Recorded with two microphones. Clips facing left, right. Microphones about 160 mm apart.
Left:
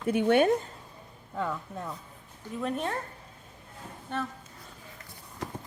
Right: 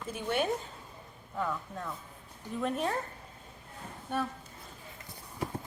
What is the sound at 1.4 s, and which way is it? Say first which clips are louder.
Speech: left 2 dB; 25° left (ahead or behind).